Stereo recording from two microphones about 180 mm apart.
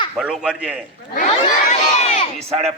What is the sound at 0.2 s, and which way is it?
Speech, 5° right (ahead or behind).